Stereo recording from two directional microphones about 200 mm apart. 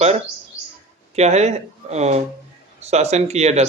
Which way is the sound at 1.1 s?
35° right (ahead or behind).